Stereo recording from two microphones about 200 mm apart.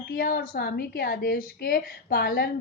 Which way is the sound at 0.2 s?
50° left (ahead or behind).